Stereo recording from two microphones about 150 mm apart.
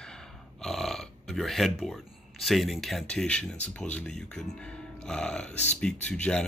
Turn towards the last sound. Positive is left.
turn(degrees=5)  # may be behind; listen again after turning